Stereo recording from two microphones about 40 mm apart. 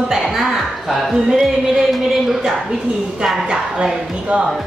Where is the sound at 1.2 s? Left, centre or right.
Centre.